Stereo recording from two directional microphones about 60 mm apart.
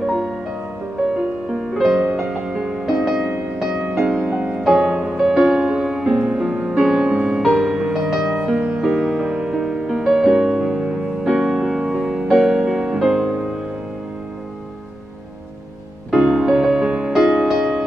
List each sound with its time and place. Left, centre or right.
0.0 s music: centre
4.4 s music: right; by 13.5 s centre
16.1 s music: centre